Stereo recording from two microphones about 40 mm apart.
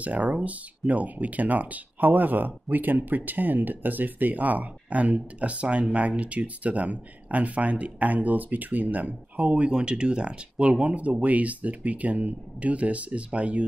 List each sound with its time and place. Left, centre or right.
0.0 s speech: right
9.7 s speech: right